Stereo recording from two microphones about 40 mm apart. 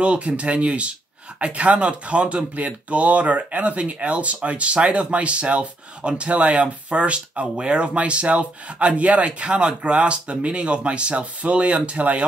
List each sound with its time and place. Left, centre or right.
0.0 s speech: right